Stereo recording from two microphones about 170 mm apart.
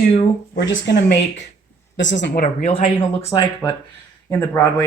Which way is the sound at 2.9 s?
20° left (ahead or behind).